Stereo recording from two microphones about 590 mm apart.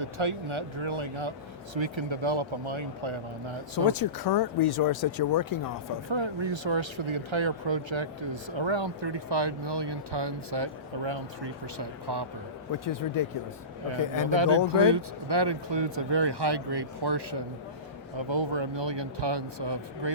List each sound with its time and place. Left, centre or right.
0.0 s speech: right
3.8 s speech: left
6.1 s speech: right
12.8 s speech: left
14.3 s speech: right